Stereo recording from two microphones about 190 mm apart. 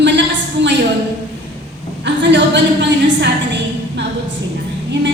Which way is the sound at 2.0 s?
65° right (ahead or behind).